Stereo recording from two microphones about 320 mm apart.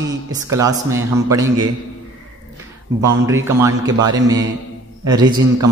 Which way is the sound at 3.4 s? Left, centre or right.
Centre.